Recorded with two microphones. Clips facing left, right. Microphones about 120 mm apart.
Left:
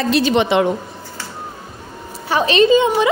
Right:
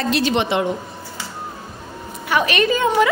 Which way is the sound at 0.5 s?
90° left.